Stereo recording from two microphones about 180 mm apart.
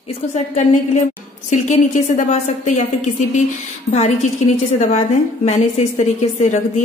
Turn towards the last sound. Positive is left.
turn(degrees=40)  # may be behind; listen again after turning